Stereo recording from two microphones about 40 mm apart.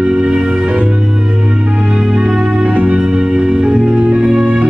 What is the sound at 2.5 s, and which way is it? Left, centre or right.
Music, right.